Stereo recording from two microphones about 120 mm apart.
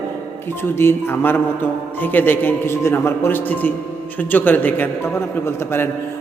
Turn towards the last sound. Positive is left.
turn(degrees=20)  # may be behind; listen again after turning